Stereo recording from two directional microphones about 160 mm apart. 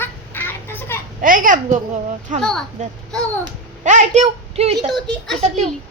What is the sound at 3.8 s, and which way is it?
Speech, 45° right (ahead or behind).